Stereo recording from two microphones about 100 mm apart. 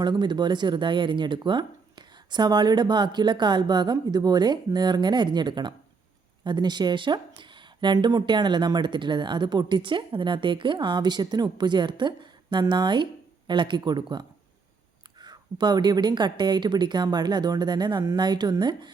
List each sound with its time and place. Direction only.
0.0 s speech: 50° right (ahead or behind)